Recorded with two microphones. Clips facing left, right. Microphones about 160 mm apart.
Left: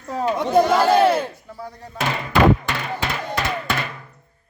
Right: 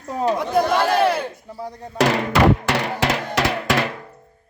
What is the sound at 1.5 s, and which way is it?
Speech, 20° right (ahead or behind).